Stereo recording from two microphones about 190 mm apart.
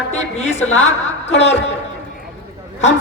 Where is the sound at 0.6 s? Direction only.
90° left.